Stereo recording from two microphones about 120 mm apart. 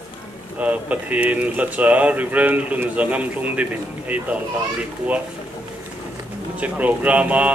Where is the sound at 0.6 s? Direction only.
10° right (ahead or behind).